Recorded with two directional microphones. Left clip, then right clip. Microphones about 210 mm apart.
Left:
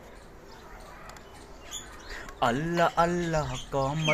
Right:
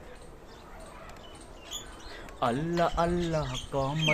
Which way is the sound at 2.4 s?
15° left (ahead or behind).